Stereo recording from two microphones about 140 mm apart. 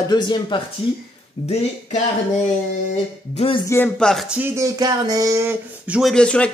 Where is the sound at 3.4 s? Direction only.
40° left (ahead or behind).